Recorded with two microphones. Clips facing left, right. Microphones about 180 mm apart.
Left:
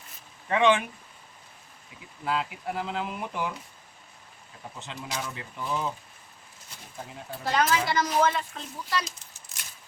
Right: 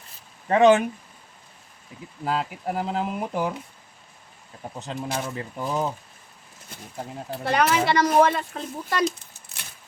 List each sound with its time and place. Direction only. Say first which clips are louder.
0.4 s speech: right 6 dB; 40° right (ahead or behind)
2.2 s speech: right 3 dB; 40° right (ahead or behind)
4.8 s speech: right 6 dB; 45° right (ahead or behind)
7.4 s speech: right 4 dB; 65° right (ahead or behind)